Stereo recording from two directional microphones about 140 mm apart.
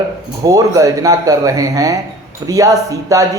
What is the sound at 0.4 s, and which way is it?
Speech, 25° right (ahead or behind).